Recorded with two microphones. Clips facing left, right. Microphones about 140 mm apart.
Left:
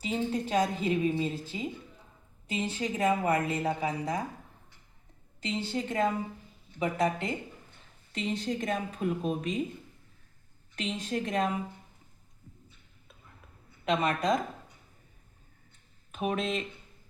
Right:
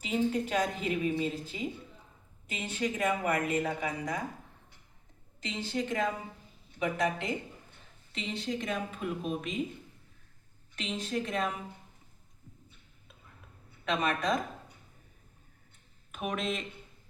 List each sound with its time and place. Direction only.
0.0 s a woman's voice: 30° left (ahead or behind)
5.4 s a woman's voice: 30° left (ahead or behind)
10.8 s a woman's voice: 35° left (ahead or behind)
13.9 s a woman's voice: 30° left (ahead or behind)
16.1 s speech: 30° left (ahead or behind)